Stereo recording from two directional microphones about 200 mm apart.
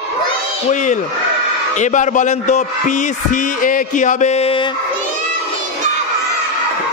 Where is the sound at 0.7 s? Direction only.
40° left (ahead or behind).